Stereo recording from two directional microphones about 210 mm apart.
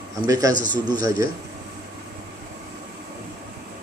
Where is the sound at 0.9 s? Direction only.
45° left (ahead or behind).